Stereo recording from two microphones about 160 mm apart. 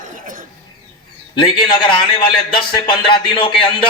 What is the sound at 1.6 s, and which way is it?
A man's voice, 30° left (ahead or behind).